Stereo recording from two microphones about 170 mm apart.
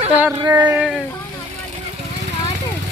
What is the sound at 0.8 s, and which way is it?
Speech, 5° right (ahead or behind).